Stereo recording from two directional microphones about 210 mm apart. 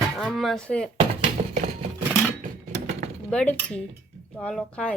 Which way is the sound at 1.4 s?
35° right (ahead or behind).